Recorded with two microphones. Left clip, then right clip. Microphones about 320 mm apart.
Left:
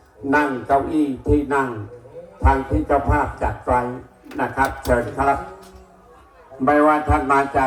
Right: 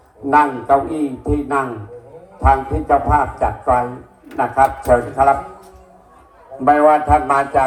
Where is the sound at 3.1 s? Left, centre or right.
Centre.